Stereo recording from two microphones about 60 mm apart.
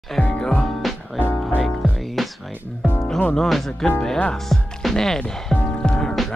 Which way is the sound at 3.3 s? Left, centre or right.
Centre.